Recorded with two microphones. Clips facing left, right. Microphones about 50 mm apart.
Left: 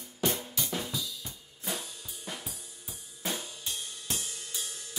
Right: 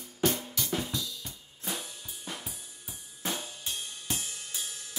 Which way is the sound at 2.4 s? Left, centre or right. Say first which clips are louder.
Even; centre.